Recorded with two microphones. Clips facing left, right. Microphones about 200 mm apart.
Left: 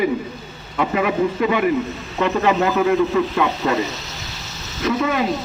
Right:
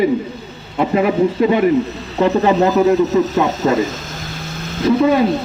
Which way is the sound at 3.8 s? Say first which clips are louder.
Right 5 dB; 50° right (ahead or behind).